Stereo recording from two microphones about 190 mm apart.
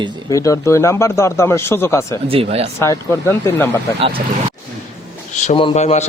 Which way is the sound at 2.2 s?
30° right (ahead or behind).